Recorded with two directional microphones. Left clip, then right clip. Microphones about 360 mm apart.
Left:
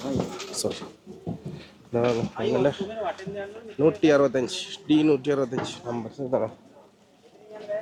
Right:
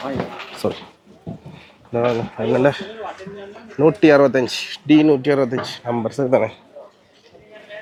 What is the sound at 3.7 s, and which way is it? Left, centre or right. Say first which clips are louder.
Speech: right 7 dB; centre.